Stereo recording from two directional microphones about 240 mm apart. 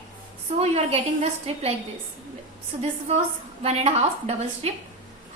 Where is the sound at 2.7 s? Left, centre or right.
Right.